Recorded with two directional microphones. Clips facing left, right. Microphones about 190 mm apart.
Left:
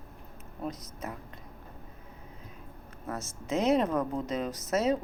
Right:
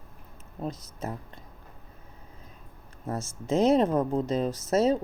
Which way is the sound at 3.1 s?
30° right (ahead or behind).